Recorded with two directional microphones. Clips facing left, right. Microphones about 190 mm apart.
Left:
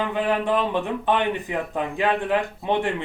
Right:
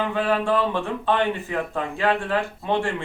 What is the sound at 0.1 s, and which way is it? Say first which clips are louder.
Speech: even; 15° left (ahead or behind).